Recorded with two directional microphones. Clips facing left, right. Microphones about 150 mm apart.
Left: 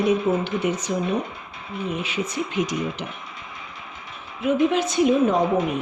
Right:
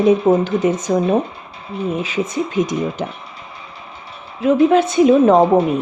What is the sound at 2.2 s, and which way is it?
Speech, 50° right (ahead or behind).